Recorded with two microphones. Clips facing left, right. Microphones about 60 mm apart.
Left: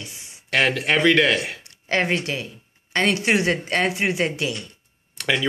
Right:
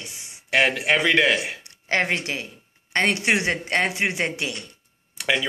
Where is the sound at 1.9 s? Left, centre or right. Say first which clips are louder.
Left 1 dB; right.